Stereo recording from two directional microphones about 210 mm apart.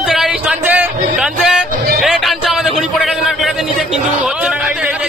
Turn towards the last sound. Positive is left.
turn(degrees=-5)  # may be behind; listen again after turning